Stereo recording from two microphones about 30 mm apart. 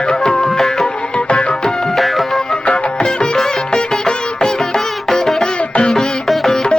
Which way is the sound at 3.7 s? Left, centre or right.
Centre.